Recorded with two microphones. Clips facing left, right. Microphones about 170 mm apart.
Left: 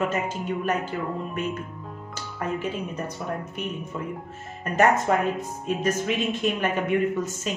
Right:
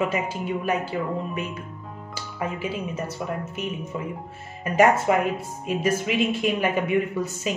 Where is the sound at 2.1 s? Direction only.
5° right (ahead or behind).